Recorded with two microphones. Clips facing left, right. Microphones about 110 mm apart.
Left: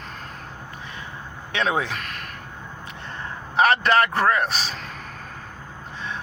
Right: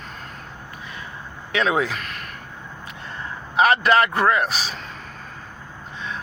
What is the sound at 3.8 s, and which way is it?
Speech, 40° left (ahead or behind).